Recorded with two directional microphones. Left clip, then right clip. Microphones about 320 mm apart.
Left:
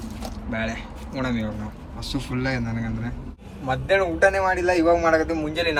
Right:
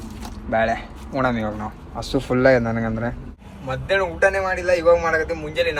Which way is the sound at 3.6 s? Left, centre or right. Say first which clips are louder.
Even; centre.